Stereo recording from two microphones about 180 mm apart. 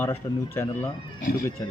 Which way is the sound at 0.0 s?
10° left (ahead or behind).